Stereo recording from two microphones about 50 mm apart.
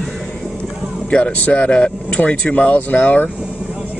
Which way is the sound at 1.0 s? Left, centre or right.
Centre.